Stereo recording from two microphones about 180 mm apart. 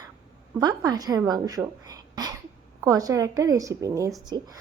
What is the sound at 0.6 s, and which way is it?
A woman's voice, 20° right (ahead or behind).